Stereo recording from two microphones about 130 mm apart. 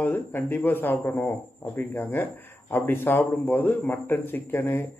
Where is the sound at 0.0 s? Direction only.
15° left (ahead or behind).